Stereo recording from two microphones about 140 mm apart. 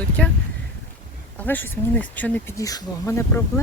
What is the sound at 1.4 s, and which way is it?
Speech, 10° left (ahead or behind).